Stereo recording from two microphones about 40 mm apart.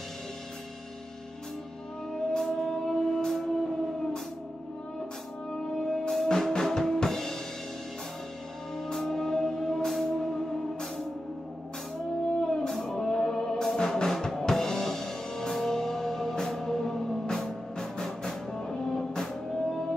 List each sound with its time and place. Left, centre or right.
2.4 s music: centre
5.7 s drum kit: centre
8.9 s music: centre
9.8 s music: centre
12.4 s music: centre